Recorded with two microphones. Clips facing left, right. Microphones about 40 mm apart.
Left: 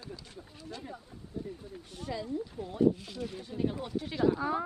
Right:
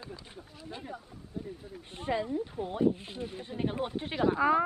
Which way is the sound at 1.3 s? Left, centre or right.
Centre.